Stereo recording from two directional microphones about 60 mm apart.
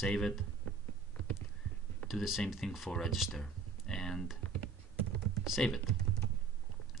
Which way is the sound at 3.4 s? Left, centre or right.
Centre.